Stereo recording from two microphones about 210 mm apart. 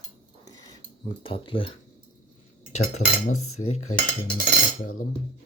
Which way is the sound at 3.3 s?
90° left.